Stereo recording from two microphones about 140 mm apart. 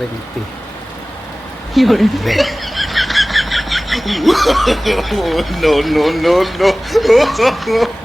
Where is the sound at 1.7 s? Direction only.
Centre (ahead or behind).